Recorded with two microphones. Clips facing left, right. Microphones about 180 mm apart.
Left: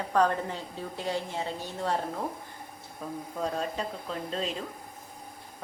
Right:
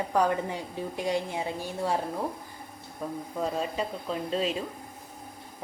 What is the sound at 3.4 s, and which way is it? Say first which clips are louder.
A woman's voice: right 2 dB; 5° right (ahead or behind).